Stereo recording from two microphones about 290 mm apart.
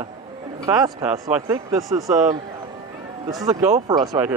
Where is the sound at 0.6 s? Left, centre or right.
Centre.